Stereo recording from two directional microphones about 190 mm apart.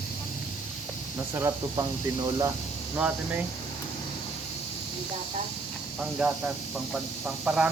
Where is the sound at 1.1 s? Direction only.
15° right (ahead or behind).